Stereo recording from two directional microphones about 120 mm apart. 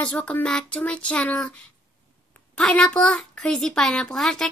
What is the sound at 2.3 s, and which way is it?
A child's voice, 10° left (ahead or behind).